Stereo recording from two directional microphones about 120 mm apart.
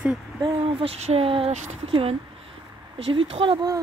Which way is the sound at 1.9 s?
55° right (ahead or behind).